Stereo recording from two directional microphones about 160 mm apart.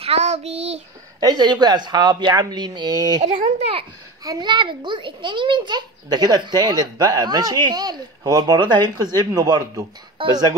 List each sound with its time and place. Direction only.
0.0 s child singing: 40° right (ahead or behind)
1.2 s a child's voice: 25° right (ahead or behind)
3.5 s a child's voice: 40° right (ahead or behind)
4.2 s a child's voice: 25° right (ahead or behind)